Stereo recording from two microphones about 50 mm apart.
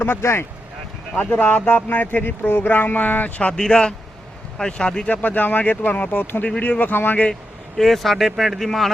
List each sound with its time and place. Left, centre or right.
0.0 s speech: left
1.2 s speech: left
3.5 s speech: centre
5.0 s speech: left
7.8 s speech: centre